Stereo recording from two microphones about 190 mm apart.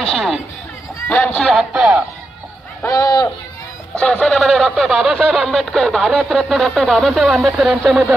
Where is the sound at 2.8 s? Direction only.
20° left (ahead or behind).